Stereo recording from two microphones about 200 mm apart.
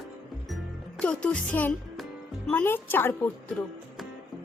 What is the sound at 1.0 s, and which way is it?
Speech, 5° left (ahead or behind).